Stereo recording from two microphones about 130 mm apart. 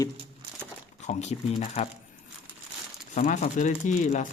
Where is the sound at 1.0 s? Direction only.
60° left (ahead or behind).